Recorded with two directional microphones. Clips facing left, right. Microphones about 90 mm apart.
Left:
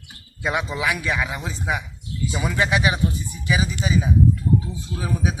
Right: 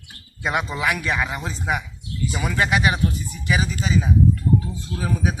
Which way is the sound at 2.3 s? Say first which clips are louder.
Even; 20° left (ahead or behind).